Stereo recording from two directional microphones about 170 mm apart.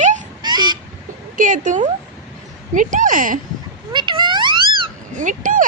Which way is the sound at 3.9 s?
30° right (ahead or behind).